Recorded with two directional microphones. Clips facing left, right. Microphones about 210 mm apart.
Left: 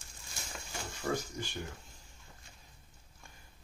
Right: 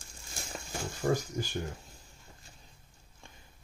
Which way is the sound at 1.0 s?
50° right (ahead or behind).